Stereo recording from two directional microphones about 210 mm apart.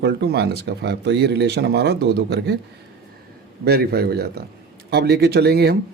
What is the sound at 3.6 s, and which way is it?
Speech, 50° right (ahead or behind).